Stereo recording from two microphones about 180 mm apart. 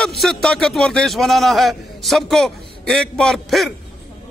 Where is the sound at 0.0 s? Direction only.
Centre (ahead or behind).